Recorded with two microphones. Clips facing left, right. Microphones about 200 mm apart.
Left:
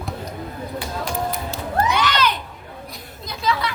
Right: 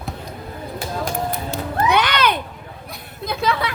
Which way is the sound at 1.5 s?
60° right (ahead or behind).